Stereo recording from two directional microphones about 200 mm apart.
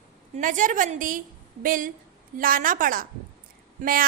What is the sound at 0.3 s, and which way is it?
A woman's voice, 40° right (ahead or behind).